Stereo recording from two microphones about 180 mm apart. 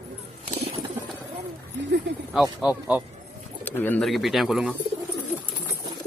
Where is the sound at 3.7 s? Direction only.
10° left (ahead or behind).